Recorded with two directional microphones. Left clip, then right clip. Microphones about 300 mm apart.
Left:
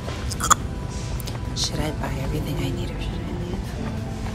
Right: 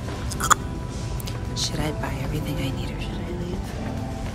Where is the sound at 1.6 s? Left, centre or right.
Centre.